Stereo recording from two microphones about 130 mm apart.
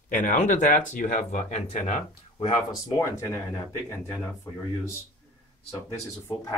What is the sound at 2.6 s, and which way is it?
Speech, 25° left (ahead or behind).